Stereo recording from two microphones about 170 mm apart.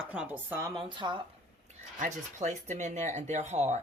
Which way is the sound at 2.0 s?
45° right (ahead or behind).